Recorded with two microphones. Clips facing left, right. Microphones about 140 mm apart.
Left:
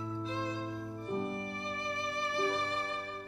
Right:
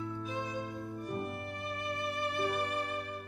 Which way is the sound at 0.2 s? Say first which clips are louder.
Left 1 dB; 15° right (ahead or behind).